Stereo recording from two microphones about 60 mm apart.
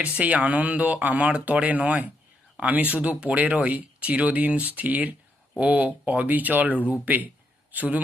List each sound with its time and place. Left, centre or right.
0.0 s speech: right